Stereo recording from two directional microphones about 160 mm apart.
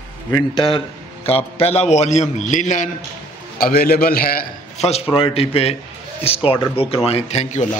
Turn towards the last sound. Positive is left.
turn(degrees=45)  # may be behind; listen again after turning